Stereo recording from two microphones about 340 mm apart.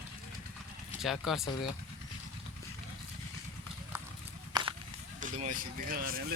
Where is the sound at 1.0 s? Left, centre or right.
Centre.